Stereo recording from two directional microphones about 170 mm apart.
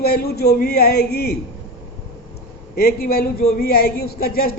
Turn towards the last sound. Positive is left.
turn(degrees=60)  # may be behind; listen again after turning